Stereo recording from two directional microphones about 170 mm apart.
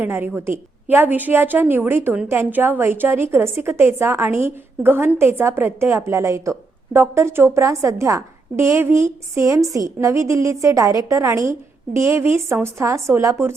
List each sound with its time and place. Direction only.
0.0 s a woman's voice: 10° right (ahead or behind)